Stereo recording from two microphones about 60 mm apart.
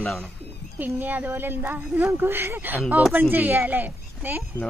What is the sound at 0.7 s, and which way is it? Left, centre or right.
Speech, right.